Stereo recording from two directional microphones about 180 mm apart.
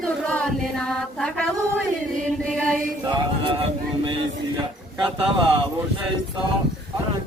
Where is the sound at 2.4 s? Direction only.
5° left (ahead or behind).